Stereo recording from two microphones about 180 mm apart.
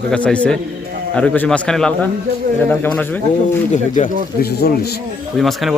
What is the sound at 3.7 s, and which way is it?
Speech, 45° left (ahead or behind).